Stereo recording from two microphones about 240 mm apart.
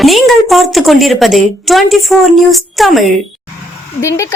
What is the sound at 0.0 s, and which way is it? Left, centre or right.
A woman's voice, centre.